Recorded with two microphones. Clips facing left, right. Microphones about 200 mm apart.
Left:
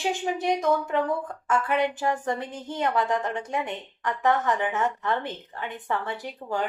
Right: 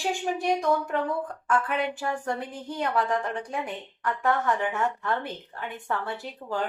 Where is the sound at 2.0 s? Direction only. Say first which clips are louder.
Left 3 dB; 20° left (ahead or behind).